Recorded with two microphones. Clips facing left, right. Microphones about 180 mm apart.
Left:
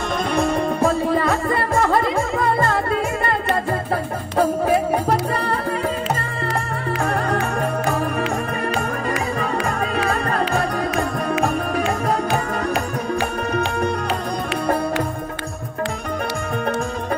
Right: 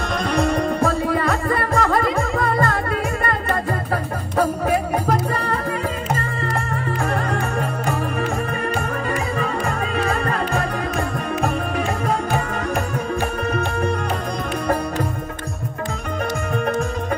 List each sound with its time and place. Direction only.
1.2 s music: 25° left (ahead or behind)
10.0 s music: 35° left (ahead or behind)